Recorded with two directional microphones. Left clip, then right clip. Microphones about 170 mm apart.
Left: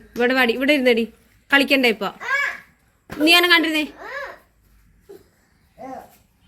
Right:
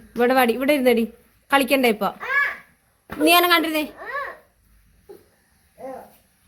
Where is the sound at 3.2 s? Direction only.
15° right (ahead or behind).